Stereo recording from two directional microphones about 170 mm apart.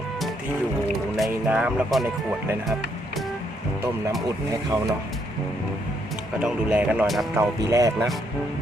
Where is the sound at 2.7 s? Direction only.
Centre (ahead or behind).